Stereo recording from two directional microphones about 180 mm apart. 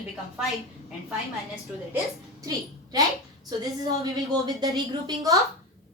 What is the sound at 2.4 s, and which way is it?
Speech, 20° right (ahead or behind).